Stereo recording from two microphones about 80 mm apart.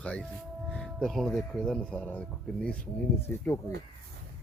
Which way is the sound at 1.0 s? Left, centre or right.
Centre.